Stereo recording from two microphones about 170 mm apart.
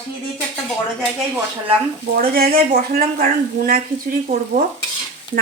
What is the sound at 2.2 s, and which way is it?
Speech, 60° right (ahead or behind).